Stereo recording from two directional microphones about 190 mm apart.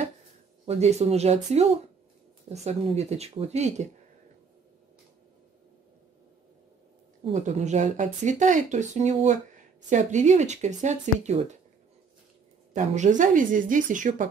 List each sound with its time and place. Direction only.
0.7 s speech: 35° right (ahead or behind)
7.2 s speech: 35° right (ahead or behind)
12.7 s speech: 40° right (ahead or behind)